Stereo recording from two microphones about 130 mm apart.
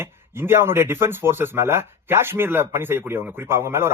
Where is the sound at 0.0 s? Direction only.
20° right (ahead or behind).